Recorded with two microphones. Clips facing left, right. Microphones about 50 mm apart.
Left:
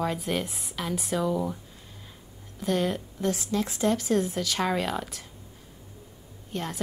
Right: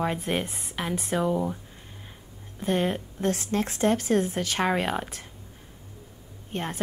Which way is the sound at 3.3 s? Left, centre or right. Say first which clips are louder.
Right 1 dB; right.